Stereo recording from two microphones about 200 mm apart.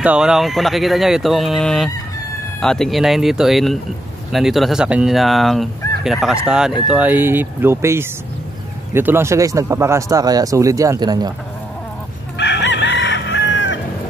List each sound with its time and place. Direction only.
0.0 s speech: 5° right (ahead or behind); by 11.3 s 20° right (ahead or behind)
12.4 s chicken: 60° left (ahead or behind)